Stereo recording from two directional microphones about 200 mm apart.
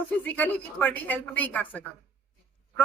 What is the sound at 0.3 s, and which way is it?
Speech, 10° left (ahead or behind).